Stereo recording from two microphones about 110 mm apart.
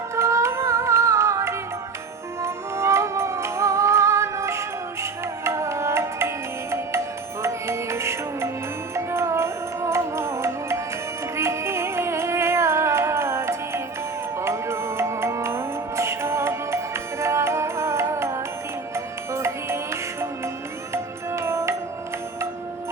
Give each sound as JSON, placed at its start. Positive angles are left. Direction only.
{"t": 0.2, "sound": "music", "side_deg": -25}